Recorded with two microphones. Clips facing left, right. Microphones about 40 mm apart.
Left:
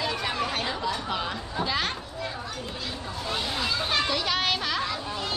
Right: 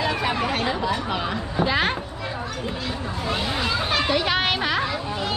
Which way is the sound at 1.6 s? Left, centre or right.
Right.